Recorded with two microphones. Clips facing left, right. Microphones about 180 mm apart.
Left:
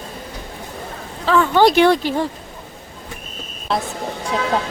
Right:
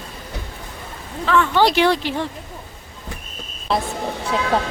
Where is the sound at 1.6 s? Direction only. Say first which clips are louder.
Left 5 dB; 50° left (ahead or behind).